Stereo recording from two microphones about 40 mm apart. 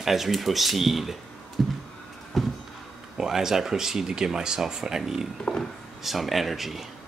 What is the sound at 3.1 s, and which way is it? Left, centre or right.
Speech, centre.